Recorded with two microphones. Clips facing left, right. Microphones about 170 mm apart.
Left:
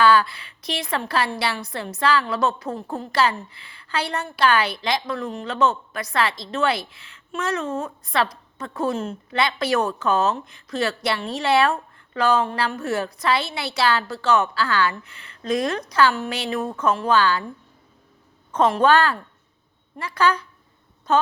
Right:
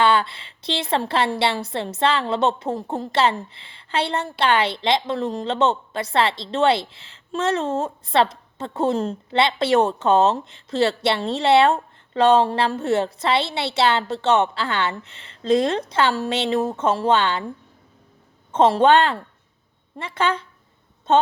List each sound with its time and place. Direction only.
0.0 s a woman's voice: 25° right (ahead or behind)
18.5 s a woman's voice: 25° right (ahead or behind)